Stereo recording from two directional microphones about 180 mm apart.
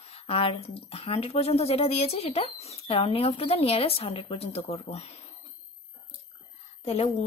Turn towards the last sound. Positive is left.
turn(degrees=35)  # may be behind; listen again after turning